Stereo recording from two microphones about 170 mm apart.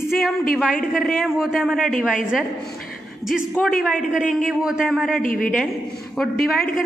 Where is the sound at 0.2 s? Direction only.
Centre (ahead or behind).